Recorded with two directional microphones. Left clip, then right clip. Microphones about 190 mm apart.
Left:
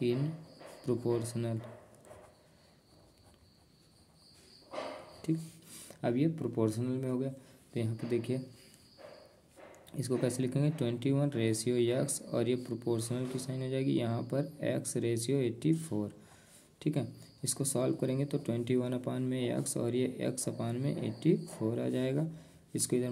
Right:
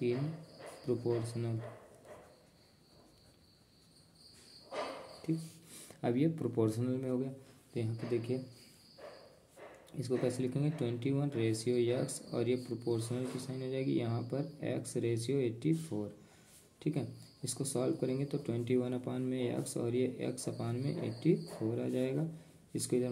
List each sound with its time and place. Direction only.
0.8 s speech: 35° left (ahead or behind)
5.7 s speech: 20° left (ahead or behind); by 8.4 s 35° left (ahead or behind)
9.9 s speech: 35° left (ahead or behind)